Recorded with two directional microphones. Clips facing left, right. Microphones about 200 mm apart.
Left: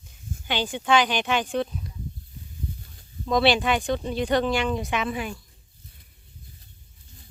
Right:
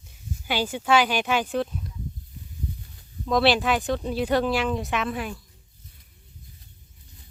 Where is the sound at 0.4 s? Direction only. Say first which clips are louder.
Right 1 dB; 5° right (ahead or behind).